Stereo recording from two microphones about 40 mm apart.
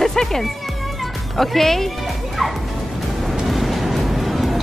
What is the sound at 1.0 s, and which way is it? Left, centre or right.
Music, centre.